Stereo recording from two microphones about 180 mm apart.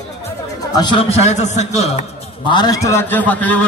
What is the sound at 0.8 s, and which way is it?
Speech, 25° left (ahead or behind).